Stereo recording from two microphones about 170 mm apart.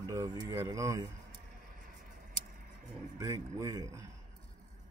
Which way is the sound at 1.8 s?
55° right (ahead or behind).